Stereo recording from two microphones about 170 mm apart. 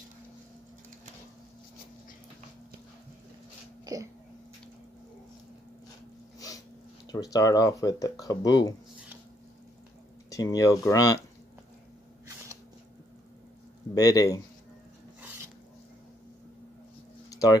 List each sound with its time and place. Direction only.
3.8 s throat clearing: 20° right (ahead or behind)
7.1 s speech: 20° left (ahead or behind)
10.3 s speech: 20° left (ahead or behind)
13.9 s speech: 20° left (ahead or behind)
17.3 s a sound: 20° left (ahead or behind)